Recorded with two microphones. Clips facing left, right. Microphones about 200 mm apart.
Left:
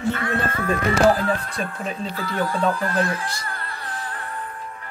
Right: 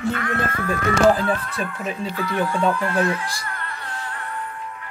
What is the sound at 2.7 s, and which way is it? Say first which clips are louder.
Music: right 2 dB; 35° left (ahead or behind).